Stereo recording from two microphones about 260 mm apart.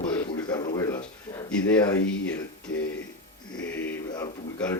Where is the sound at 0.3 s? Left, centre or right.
Centre.